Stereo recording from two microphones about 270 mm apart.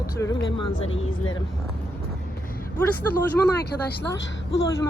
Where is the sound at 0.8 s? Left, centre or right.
Left.